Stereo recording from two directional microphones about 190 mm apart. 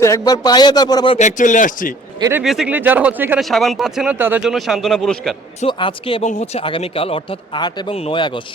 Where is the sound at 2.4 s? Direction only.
Centre (ahead or behind).